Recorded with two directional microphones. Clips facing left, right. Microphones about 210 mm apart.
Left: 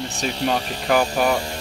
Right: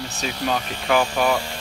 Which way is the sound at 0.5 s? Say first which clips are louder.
Left 2 dB; 35° left (ahead or behind).